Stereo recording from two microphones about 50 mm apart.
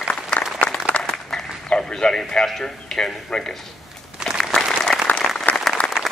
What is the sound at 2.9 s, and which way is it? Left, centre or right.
Speech, centre.